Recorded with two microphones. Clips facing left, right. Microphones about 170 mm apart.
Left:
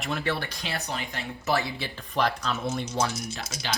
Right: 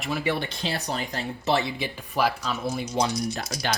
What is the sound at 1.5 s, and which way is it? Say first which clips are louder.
Speech: right 2 dB; 20° right (ahead or behind).